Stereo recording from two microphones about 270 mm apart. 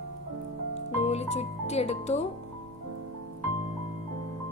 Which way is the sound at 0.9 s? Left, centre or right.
Left.